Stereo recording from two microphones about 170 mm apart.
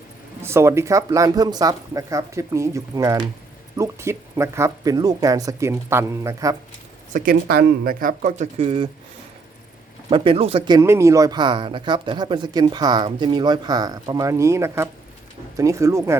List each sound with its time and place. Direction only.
0.4 s speech: 15° right (ahead or behind)
7.1 s speech: 60° right (ahead or behind)
8.5 s speech: 30° right (ahead or behind)
10.1 s speech: 30° right (ahead or behind)
10.7 s speech: 20° right (ahead or behind)